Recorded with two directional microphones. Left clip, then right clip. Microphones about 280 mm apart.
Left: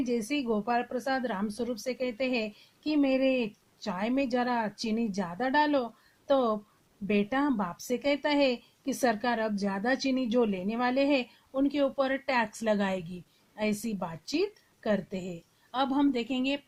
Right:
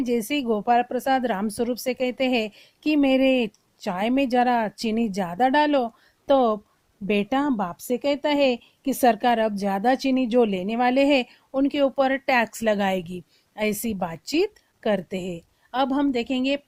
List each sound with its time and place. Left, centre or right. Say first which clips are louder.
0.0 s a woman's voice: right 6 dB; right